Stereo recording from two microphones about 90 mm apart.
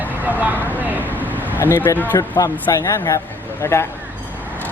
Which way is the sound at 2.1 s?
50° left (ahead or behind).